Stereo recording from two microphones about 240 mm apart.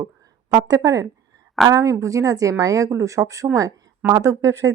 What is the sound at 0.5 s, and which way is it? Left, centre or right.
Speech, centre.